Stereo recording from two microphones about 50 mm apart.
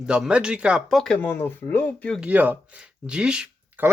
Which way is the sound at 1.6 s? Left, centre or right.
Left.